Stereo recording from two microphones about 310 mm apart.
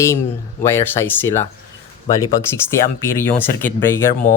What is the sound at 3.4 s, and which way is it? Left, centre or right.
Speech, centre.